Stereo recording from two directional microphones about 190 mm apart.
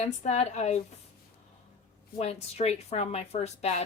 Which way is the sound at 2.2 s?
35° left (ahead or behind).